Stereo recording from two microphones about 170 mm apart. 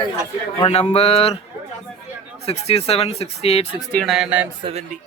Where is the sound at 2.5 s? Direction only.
40° left (ahead or behind).